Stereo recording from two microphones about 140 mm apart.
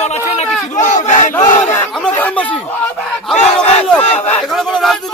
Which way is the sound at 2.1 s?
10° left (ahead or behind).